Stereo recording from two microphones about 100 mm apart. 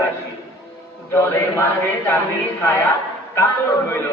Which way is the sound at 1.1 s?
25° left (ahead or behind).